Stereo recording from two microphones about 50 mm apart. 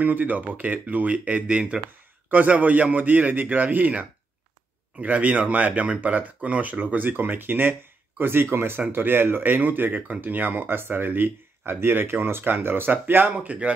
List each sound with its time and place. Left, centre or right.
0.0 s speech: right
13.5 s speech: right